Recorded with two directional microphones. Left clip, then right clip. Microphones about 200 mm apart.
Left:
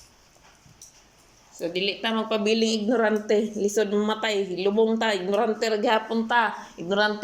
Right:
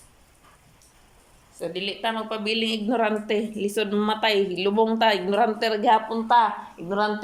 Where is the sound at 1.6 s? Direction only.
Centre (ahead or behind); by 6.2 s 20° right (ahead or behind).